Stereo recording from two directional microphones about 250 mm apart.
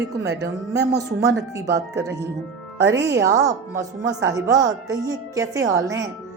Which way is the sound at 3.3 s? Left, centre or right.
Centre.